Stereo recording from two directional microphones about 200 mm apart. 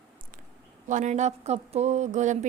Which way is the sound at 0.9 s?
35° right (ahead or behind).